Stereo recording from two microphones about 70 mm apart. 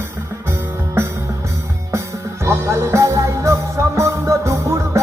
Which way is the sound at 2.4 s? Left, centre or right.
Right.